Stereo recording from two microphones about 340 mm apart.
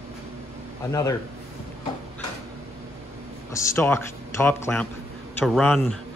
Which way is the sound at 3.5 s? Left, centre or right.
Centre.